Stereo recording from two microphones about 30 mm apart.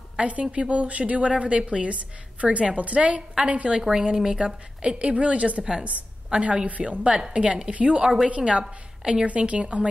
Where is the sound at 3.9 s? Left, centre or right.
Right.